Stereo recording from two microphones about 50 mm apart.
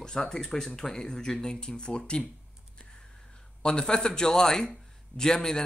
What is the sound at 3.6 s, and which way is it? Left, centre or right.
Speech, centre.